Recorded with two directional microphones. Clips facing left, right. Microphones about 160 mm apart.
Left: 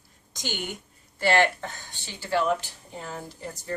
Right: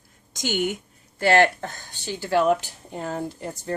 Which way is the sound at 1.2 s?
50° right (ahead or behind).